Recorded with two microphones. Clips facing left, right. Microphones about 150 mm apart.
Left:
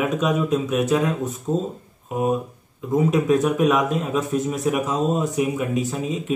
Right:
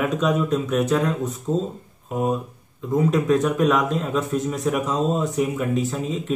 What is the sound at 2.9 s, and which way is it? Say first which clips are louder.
A man's voice: left 1 dB; 5° left (ahead or behind).